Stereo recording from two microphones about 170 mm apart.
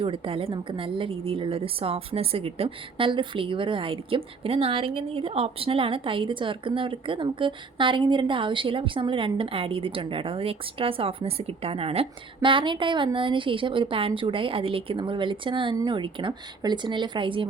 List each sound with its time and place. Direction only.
0.0 s a woman's voice: 30° right (ahead or behind)